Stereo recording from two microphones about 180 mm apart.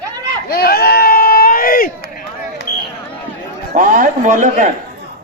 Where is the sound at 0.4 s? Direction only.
55° left (ahead or behind).